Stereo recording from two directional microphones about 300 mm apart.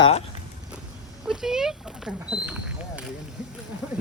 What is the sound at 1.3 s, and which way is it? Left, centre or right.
Speech, centre.